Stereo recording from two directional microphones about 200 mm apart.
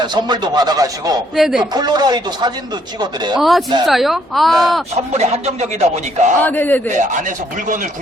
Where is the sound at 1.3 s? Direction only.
Centre (ahead or behind).